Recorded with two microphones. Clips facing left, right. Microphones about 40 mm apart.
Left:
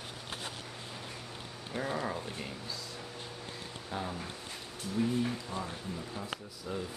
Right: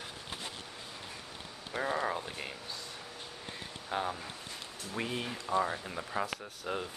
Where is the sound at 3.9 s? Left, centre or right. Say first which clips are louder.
Right 4 dB; right.